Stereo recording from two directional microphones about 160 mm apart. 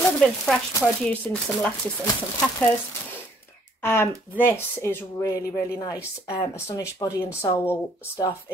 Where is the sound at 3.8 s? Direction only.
15° left (ahead or behind).